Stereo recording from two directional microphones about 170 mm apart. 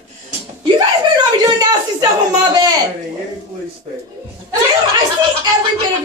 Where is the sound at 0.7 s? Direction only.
25° right (ahead or behind).